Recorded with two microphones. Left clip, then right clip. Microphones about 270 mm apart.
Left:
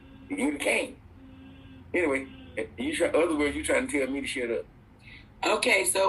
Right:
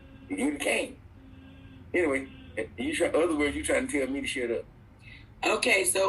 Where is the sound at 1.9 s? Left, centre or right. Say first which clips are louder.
Even; left.